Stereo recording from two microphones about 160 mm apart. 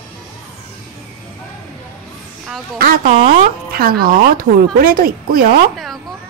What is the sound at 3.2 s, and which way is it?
Speech, 65° right (ahead or behind).